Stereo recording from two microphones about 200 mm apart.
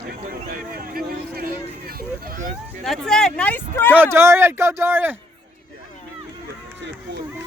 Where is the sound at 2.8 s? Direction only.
Centre (ahead or behind).